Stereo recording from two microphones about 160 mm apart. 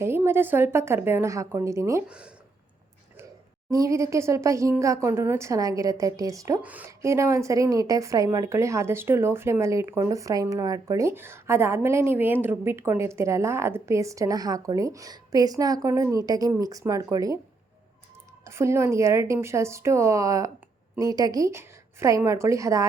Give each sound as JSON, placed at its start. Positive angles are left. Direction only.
{"t": 0.0, "sound": "a woman's voice", "side_deg": -15}
{"t": 2.0, "sound": "a woman's voice", "side_deg": -5}
{"t": 3.7, "sound": "speech", "side_deg": -20}
{"t": 6.6, "sound": "a woman's voice", "side_deg": -10}
{"t": 18.4, "sound": "a woman's voice", "side_deg": -15}